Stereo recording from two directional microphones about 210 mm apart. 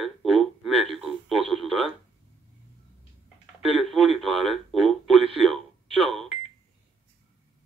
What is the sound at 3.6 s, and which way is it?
Speech, centre (ahead or behind).